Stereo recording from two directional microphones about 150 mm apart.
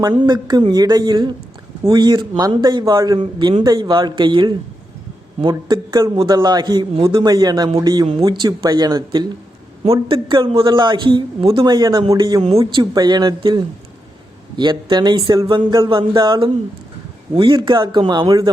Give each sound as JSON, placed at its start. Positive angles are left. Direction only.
{"t": 0.3, "sound": "a man's voice", "side_deg": -30}
{"t": 9.8, "sound": "a man's voice", "side_deg": -35}